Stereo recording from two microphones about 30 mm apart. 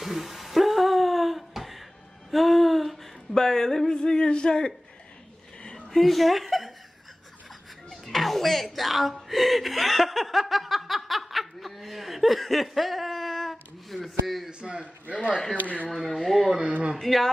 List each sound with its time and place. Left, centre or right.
0.0 s a sound: centre; by 5.9 s left
5.9 s speech: centre
7.9 s a sound: centre
14.0 s speech: centre
14.5 s a man's voice: right
15.5 s speech: left
15.9 s speech: centre